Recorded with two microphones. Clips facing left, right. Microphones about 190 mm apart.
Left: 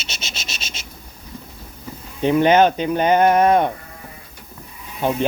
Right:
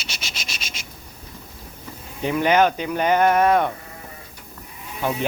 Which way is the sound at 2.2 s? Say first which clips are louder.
Left 4 dB; 25° left (ahead or behind).